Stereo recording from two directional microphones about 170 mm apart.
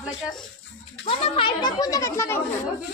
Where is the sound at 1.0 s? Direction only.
30° left (ahead or behind); by 2.4 s 15° left (ahead or behind).